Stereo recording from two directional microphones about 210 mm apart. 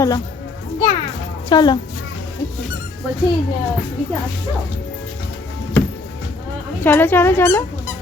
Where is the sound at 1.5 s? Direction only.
20° left (ahead or behind).